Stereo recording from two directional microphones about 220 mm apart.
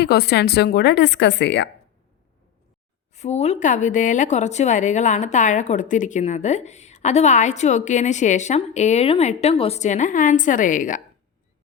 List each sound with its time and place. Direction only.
0.0 s speech: 50° left (ahead or behind)
3.2 s speech: 30° left (ahead or behind)